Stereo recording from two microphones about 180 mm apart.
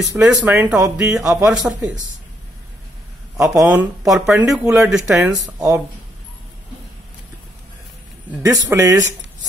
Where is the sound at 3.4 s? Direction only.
5° right (ahead or behind).